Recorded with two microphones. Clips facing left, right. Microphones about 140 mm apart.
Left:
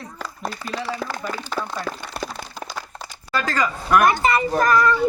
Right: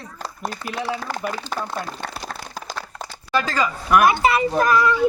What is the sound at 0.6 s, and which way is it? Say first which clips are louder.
Speech: left 2 dB; 5° right (ahead or behind).